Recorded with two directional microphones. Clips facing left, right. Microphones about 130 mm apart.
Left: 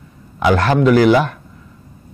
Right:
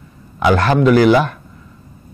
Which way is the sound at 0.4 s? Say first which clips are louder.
Right 1 dB; 15° right (ahead or behind).